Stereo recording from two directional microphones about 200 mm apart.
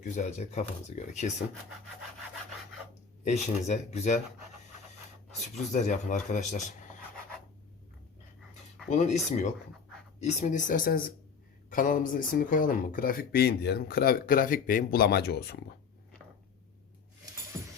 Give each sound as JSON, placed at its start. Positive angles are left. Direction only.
{"t": 0.0, "sound": "speech", "side_deg": 35}
{"t": 3.2, "sound": "speech", "side_deg": 35}
{"t": 5.4, "sound": "speech", "side_deg": 35}
{"t": 8.9, "sound": "speech", "side_deg": 35}